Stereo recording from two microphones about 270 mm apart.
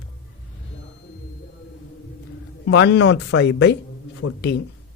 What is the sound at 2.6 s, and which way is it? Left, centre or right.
Speech, left.